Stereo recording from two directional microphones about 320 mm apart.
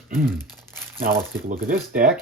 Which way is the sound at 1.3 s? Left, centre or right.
Right.